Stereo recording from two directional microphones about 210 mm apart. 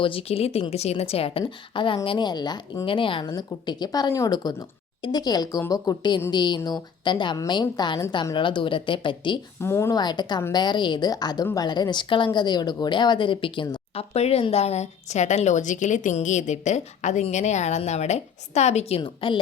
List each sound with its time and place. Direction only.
0.0 s a woman's voice: 25° left (ahead or behind)
9.6 s a woman's voice: 10° left (ahead or behind)